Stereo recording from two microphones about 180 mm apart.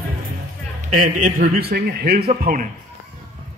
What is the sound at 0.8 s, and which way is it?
A man's voice, 50° right (ahead or behind).